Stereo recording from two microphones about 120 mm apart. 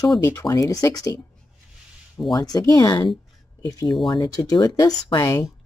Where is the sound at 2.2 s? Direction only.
35° left (ahead or behind).